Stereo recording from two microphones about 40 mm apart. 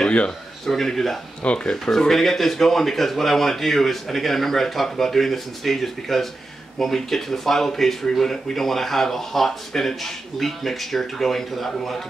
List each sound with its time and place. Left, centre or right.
0.7 s speech: centre
1.4 s speech: left
1.9 s speech: centre